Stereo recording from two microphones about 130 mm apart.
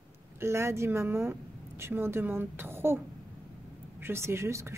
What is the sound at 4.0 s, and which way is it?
Speech, 20° right (ahead or behind).